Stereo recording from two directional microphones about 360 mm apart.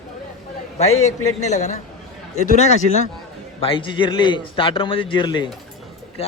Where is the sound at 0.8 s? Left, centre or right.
Centre.